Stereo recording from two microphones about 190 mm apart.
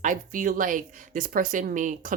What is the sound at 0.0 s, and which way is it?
Speech, 40° right (ahead or behind).